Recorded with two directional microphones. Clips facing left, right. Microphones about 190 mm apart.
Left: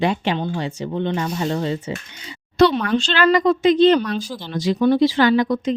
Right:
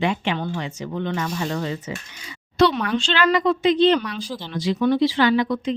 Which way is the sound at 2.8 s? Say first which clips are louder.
Left 3 dB; 40° left (ahead or behind).